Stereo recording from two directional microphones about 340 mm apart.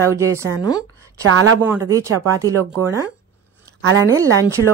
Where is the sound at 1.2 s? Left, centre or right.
Right.